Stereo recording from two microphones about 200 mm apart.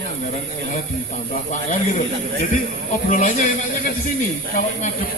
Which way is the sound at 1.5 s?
40° left (ahead or behind).